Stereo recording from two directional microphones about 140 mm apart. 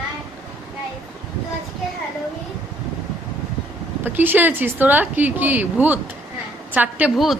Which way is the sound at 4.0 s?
15° right (ahead or behind).